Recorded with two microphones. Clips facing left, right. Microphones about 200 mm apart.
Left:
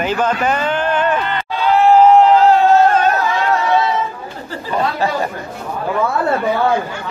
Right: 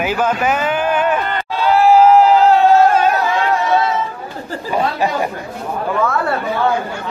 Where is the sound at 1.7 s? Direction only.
5° right (ahead or behind).